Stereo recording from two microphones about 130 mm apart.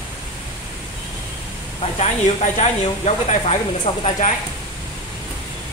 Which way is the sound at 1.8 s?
60° left (ahead or behind).